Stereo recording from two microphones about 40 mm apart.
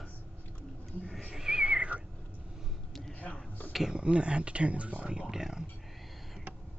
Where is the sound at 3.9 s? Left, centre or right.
Right.